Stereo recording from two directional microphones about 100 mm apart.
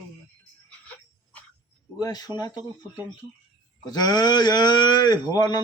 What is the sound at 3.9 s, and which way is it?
Speech, 45° left (ahead or behind).